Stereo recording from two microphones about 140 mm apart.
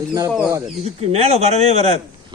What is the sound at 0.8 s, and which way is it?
A man's voice, 50° right (ahead or behind).